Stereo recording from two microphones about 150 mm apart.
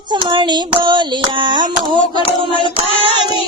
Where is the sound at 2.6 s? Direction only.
40° left (ahead or behind).